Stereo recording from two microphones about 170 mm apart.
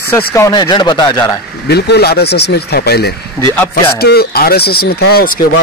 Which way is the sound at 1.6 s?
75° left (ahead or behind).